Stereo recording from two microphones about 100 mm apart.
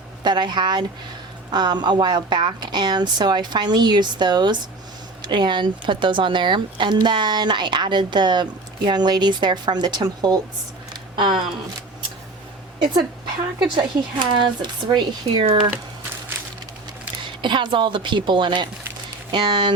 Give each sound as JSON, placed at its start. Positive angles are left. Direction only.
{"t": 0.3, "sound": "speech", "side_deg": -50}
{"t": 11.2, "sound": "speech", "side_deg": -50}
{"t": 13.6, "sound": "speech", "side_deg": -50}
{"t": 17.4, "sound": "speech", "side_deg": -50}